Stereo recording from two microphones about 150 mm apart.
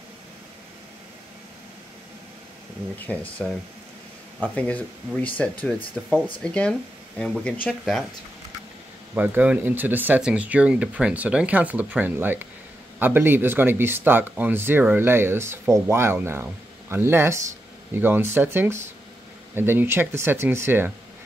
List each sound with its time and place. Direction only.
3.1 s speech: 10° left (ahead or behind)
9.1 s speech: 10° right (ahead or behind)